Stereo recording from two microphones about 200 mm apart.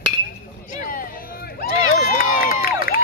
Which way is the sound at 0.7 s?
45° left (ahead or behind).